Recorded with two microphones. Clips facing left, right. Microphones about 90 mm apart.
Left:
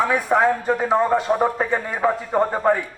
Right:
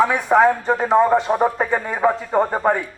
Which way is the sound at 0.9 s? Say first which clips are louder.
Right 4 dB; 15° right (ahead or behind).